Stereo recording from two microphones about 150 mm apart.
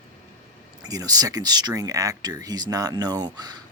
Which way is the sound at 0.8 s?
25° right (ahead or behind).